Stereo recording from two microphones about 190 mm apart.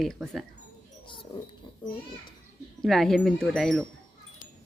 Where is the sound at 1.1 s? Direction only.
25° left (ahead or behind).